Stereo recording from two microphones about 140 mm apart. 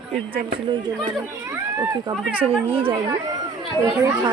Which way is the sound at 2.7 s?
40° right (ahead or behind).